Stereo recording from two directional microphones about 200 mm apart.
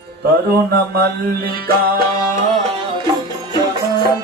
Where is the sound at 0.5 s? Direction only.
50° right (ahead or behind).